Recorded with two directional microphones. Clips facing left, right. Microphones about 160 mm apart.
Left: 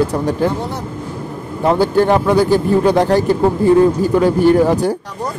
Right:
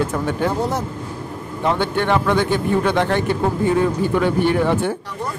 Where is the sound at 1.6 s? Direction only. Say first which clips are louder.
Left 6 dB; 35° left (ahead or behind).